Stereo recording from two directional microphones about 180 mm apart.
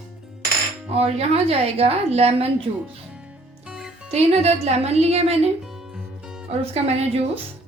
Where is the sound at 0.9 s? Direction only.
35° right (ahead or behind).